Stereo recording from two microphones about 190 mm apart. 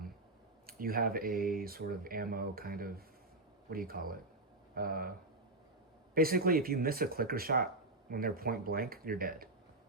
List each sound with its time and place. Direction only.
0.7 s speech: 50° right (ahead or behind)
6.1 s speech: 50° right (ahead or behind)